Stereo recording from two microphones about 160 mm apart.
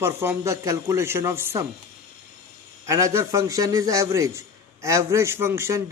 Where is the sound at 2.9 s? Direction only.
20° right (ahead or behind).